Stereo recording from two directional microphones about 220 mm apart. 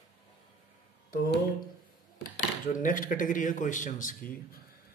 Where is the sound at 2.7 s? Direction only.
35° left (ahead or behind).